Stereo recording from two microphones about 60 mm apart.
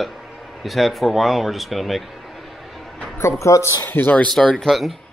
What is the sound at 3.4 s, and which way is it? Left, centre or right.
Speech, left.